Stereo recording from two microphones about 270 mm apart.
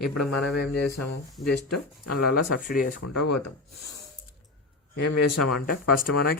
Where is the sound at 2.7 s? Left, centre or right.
Left.